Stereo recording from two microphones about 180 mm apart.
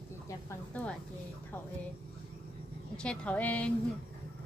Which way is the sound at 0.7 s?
10° left (ahead or behind).